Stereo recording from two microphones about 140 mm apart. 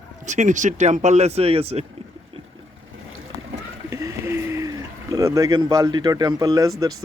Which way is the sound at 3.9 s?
20° right (ahead or behind).